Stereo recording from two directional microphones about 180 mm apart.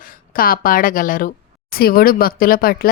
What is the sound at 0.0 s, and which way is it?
A woman's voice, 50° left (ahead or behind).